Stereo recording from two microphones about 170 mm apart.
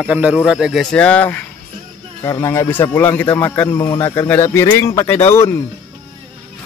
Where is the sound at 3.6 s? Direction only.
25° left (ahead or behind).